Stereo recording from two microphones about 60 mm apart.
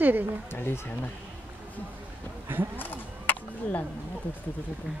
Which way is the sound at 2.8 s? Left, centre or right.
Left.